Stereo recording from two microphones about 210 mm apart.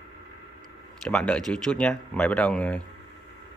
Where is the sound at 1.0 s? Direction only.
5° left (ahead or behind).